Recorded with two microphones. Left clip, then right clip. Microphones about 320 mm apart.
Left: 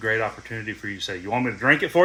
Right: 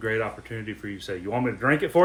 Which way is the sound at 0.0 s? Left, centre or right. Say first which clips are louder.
Left 3 dB; centre.